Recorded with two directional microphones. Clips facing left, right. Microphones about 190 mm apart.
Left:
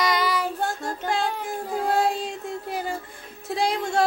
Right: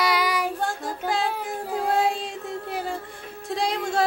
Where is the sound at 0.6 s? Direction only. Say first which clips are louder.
Even; centre (ahead or behind).